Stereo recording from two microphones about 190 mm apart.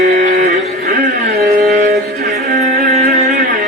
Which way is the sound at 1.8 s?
55° right (ahead or behind).